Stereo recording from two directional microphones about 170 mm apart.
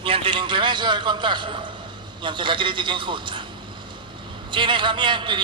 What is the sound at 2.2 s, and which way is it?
A man's voice, 30° right (ahead or behind).